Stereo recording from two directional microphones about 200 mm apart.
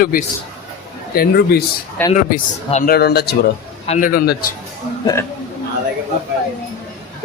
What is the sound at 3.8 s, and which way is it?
Speech, 35° left (ahead or behind).